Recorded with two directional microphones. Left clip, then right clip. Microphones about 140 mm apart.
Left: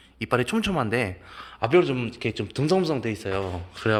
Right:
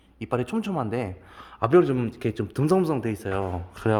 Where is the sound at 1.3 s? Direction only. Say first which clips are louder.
Left 2 dB; 40° right (ahead or behind).